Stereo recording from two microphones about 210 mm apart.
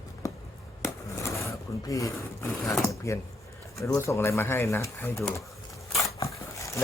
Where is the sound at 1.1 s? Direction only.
15° left (ahead or behind).